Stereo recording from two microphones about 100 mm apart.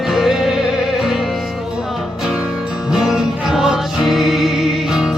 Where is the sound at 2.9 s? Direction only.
5° right (ahead or behind).